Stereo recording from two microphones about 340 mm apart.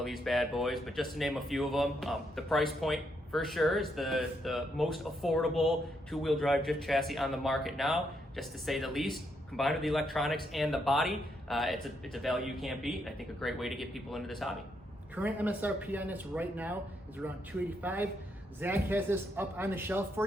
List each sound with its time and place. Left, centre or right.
0.0 s speech: centre
17.8 s a man's voice: centre